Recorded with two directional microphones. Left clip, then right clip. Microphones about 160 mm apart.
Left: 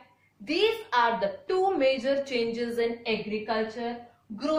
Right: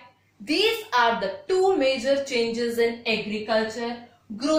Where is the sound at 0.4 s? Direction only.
15° left (ahead or behind).